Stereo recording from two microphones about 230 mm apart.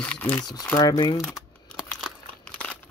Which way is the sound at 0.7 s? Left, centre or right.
Centre.